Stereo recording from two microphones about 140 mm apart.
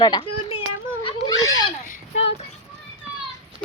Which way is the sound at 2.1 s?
45° left (ahead or behind).